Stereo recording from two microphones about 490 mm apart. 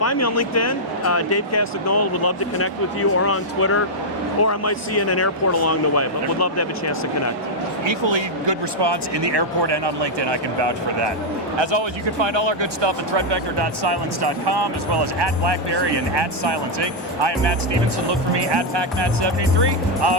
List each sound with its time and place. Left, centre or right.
0.0 s speech: left
7.9 s speech: right